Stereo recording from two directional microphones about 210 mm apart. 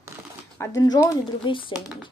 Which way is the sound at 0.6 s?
15° left (ahead or behind).